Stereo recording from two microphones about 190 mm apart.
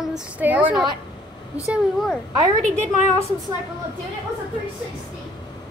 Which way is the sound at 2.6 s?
35° right (ahead or behind).